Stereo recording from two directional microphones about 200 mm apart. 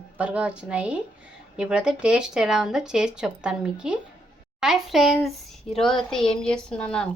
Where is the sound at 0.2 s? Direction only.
5° right (ahead or behind).